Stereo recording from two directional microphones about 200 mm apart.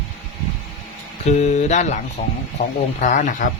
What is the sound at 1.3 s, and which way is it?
Speech, 35° left (ahead or behind).